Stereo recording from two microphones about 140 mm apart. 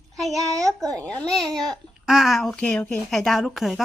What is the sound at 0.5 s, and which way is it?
Speech, 25° right (ahead or behind).